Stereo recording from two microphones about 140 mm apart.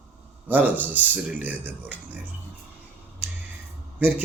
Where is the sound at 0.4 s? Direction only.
10° right (ahead or behind).